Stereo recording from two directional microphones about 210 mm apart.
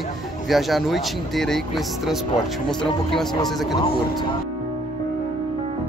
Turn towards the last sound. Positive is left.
turn(degrees=25)  # may be behind; listen again after turning